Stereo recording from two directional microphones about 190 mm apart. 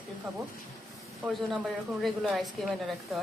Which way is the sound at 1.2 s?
5° right (ahead or behind).